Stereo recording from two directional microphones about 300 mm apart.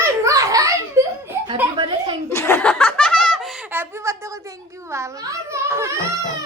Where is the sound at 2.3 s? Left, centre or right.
Centre.